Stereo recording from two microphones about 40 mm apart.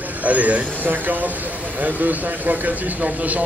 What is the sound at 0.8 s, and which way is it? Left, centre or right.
Speech, right.